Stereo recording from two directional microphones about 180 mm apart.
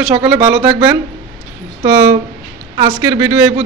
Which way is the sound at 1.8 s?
15° right (ahead or behind).